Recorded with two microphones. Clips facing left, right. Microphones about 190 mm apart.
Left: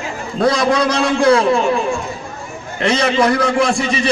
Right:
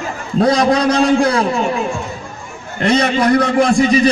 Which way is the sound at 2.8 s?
35° right (ahead or behind).